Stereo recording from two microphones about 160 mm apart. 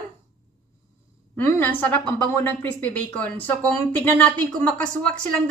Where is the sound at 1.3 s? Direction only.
15° left (ahead or behind).